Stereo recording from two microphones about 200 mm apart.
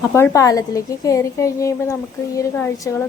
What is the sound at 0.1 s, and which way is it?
Speech, 15° left (ahead or behind).